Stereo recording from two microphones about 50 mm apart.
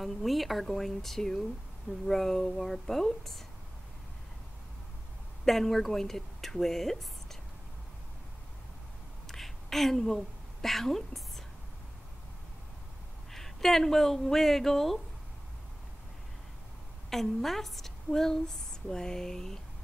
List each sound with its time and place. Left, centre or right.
0.0 s a woman's voice: centre
5.4 s a woman's voice: centre
9.3 s a sound: centre
13.3 s speech: centre
17.1 s a woman's voice: centre